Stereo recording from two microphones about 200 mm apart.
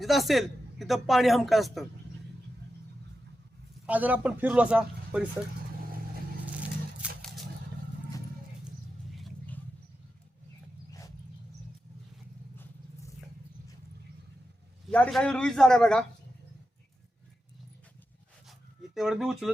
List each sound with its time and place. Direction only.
0.0 s speech: centre (ahead or behind)
3.8 s a man's voice: 10° right (ahead or behind)
6.4 s vehicle: 5° right (ahead or behind)
9.1 s a sound: centre (ahead or behind)
14.8 s speech: 5° left (ahead or behind)
18.9 s speech: centre (ahead or behind)